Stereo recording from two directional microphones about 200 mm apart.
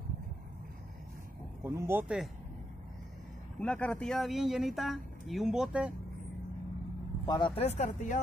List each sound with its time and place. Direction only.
1.6 s speech: 15° right (ahead or behind)
3.5 s speech: 5° left (ahead or behind)
7.2 s speech: 20° left (ahead or behind); by 8.2 s 35° left (ahead or behind)